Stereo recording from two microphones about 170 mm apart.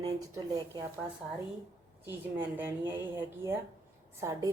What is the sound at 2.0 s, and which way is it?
A woman's voice, 10° right (ahead or behind).